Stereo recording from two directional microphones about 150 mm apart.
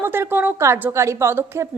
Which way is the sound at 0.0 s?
15° right (ahead or behind).